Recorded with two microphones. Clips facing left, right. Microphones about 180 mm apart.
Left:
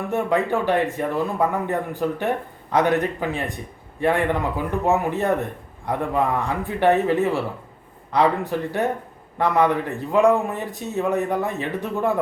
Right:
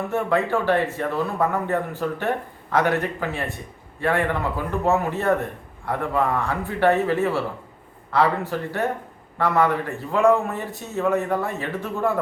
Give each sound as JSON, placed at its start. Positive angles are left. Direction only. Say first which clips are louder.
{"t": 0.1, "sound": "speech", "louder": "left 1 dB", "side_deg": 15}